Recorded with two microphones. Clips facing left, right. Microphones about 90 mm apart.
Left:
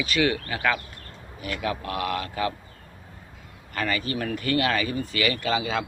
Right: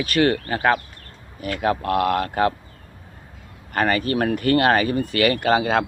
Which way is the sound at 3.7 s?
50° right (ahead or behind).